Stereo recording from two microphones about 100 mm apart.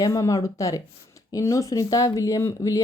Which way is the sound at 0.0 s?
35° left (ahead or behind).